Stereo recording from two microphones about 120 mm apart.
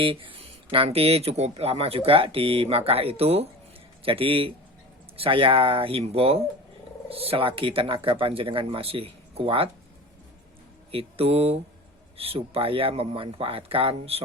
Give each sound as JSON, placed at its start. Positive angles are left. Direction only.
{"t": 0.0, "sound": "speech", "side_deg": -45}
{"t": 10.9, "sound": "speech", "side_deg": -55}